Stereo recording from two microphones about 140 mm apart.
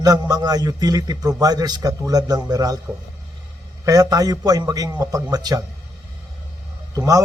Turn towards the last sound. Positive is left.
turn(degrees=-25)  # may be behind; listen again after turning